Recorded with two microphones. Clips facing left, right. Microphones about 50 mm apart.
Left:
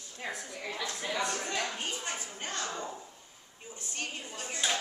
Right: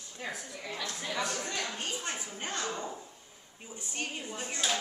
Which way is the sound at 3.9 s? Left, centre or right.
Centre.